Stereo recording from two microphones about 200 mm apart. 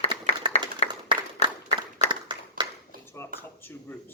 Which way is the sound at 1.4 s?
35° left (ahead or behind).